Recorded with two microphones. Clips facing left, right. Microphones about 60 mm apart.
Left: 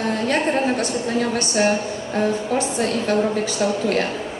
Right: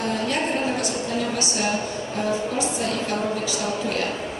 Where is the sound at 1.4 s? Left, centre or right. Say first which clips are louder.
Left 6 dB; left.